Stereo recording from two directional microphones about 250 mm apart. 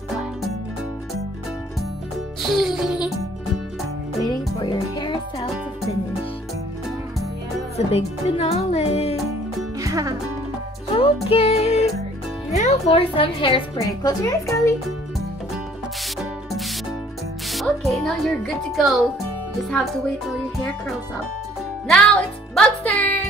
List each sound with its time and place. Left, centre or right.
2.4 s music: centre
4.6 s music: centre
7.7 s music: left
9.8 s music: centre
11.0 s music: left
12.4 s a woman's voice: left
17.5 s speech: centre
21.8 s music: centre